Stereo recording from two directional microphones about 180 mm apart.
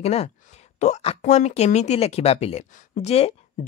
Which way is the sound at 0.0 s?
35° left (ahead or behind).